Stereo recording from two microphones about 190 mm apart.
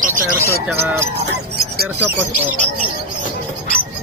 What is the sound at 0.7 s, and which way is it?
Speech, 10° right (ahead or behind).